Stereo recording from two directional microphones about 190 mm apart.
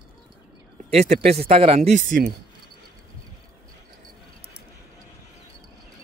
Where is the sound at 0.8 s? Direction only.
35° right (ahead or behind).